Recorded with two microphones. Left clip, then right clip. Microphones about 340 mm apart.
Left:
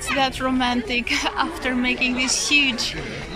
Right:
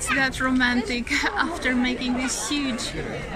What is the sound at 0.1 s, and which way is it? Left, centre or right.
A woman's voice, centre.